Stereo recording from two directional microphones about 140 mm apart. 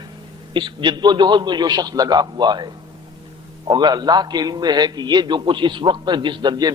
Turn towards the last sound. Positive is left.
turn(degrees=-30)  # may be behind; listen again after turning